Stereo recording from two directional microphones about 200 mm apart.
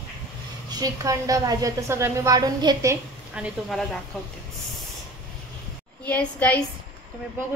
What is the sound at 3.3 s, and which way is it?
Speech, centre (ahead or behind).